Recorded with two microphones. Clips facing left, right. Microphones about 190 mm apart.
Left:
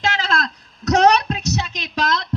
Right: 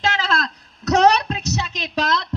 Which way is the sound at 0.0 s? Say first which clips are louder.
Even; 35° right (ahead or behind).